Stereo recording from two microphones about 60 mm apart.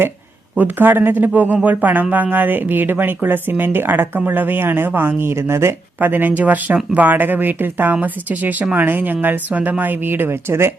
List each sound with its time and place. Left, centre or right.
0.5 s speech: right
6.0 s a woman's voice: right